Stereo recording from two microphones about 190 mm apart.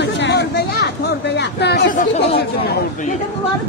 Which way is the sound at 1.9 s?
35° left (ahead or behind).